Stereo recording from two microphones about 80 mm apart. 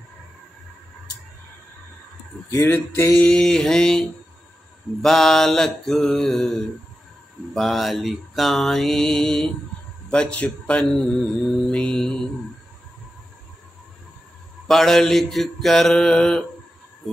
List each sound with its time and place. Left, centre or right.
2.6 s music: left
3.2 s mantra: centre
7.5 s mantra: centre
10.0 s a man's voice: centre
10.4 s mantra: centre
14.7 s mantra: centre
17.0 s a sound: centre